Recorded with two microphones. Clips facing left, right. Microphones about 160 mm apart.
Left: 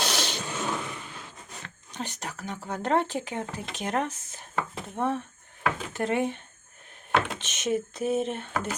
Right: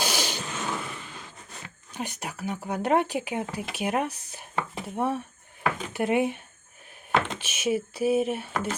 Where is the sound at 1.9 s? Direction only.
10° right (ahead or behind).